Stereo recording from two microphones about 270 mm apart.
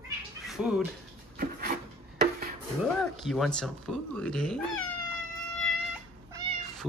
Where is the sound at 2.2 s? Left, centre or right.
Right.